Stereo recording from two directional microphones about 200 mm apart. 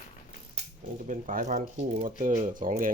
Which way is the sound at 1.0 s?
40° right (ahead or behind).